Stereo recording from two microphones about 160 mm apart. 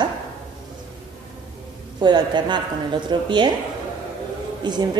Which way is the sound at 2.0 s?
30° right (ahead or behind).